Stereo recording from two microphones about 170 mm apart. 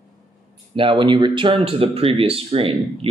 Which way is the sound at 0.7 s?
30° right (ahead or behind).